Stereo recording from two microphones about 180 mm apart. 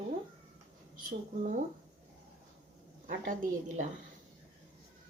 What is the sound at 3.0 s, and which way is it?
Speech, 45° right (ahead or behind).